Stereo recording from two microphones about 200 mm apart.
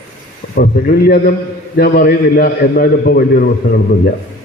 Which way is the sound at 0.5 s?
50° left (ahead or behind).